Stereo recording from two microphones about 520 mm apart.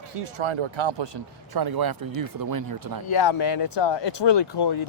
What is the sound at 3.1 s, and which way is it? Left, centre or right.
Speech, left.